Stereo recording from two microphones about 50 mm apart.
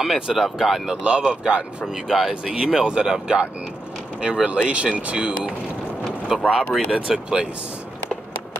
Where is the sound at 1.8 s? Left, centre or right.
Centre.